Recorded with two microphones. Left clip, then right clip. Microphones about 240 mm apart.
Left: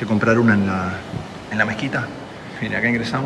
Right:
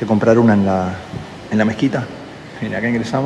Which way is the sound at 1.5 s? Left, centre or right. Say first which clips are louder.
Right 3 dB; right.